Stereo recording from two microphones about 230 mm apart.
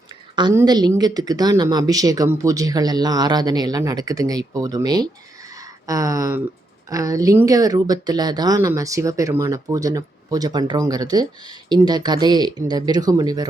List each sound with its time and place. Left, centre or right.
0.3 s speech: centre
5.5 s a sound: centre
6.9 s speech: centre